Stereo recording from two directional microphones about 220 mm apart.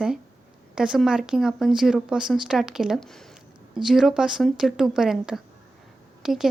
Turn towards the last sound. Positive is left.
turn(degrees=0)  # may be behind; listen again after turning